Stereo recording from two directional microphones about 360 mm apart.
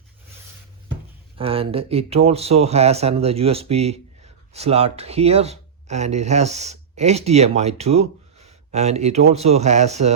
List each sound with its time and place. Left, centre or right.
1.4 s speech: centre